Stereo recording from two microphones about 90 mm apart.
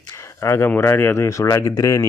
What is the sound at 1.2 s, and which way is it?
Speech, 35° left (ahead or behind).